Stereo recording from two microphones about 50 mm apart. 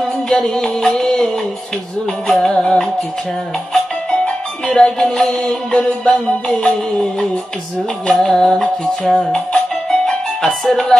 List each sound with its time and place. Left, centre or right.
0.3 s music: centre
2.2 s music: centre
4.7 s music: centre
5.7 s music: centre
8.1 s music: centre